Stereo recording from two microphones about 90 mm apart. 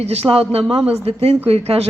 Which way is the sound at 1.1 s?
90° right.